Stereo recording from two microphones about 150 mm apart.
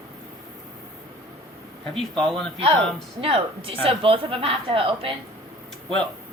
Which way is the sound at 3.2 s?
40° right (ahead or behind).